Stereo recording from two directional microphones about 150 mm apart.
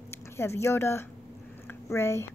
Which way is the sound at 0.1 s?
15° left (ahead or behind).